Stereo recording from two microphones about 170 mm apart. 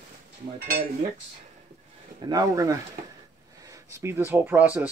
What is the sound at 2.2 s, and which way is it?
Speech, 20° right (ahead or behind).